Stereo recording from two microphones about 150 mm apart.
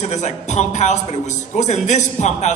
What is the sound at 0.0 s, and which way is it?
Speech, 50° left (ahead or behind).